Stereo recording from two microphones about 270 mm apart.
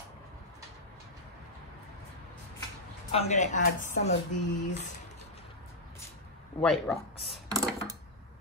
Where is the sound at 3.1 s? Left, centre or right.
Left.